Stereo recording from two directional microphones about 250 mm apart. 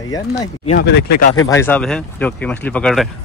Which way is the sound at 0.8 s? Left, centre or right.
Left.